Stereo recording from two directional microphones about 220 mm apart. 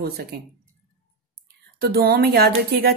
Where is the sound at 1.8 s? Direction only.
45° right (ahead or behind).